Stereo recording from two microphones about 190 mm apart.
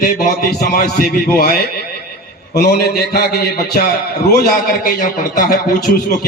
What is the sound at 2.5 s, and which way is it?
A man's voice, 60° left (ahead or behind).